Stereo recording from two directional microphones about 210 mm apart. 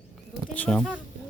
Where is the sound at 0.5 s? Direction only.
5° left (ahead or behind).